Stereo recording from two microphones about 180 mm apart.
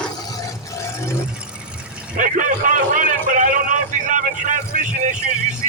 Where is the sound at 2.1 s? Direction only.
45° right (ahead or behind).